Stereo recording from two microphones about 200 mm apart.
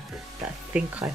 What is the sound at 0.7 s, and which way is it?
Speech, 5° right (ahead or behind).